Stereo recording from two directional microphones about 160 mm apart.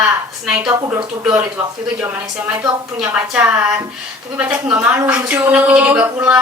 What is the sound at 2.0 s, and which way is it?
A woman's voice, 15° right (ahead or behind).